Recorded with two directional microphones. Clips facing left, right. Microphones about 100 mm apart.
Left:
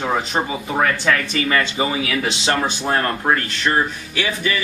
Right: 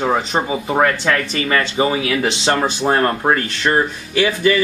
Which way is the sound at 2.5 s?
30° right (ahead or behind).